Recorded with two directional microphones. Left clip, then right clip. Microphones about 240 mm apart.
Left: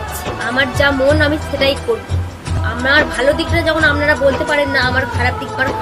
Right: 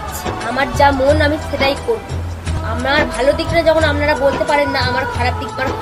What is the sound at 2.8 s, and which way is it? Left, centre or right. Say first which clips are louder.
A woman's voice: left 2 dB; centre.